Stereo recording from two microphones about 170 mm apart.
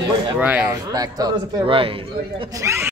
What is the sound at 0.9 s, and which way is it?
A man's voice, 20° right (ahead or behind).